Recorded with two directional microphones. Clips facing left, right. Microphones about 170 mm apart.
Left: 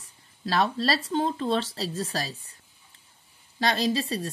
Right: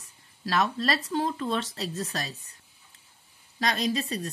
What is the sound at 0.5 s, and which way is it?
Speech, 30° left (ahead or behind).